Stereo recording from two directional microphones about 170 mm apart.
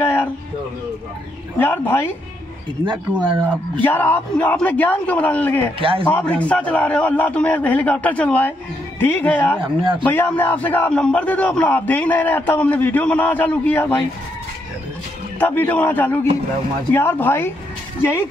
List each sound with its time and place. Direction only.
0.0 s music: 10° left (ahead or behind)
1.6 s a man's voice: 10° left (ahead or behind)
3.8 s a man's voice: 10° left (ahead or behind)
5.8 s speech: 30° right (ahead or behind)
6.0 s a man's voice: 10° left (ahead or behind)
9.6 s speech: 30° right (ahead or behind)
10.0 s a man's voice: 10° left (ahead or behind)
15.3 s a man's voice: 10° left (ahead or behind)